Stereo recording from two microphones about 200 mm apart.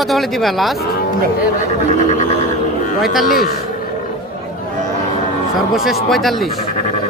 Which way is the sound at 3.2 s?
45° left (ahead or behind).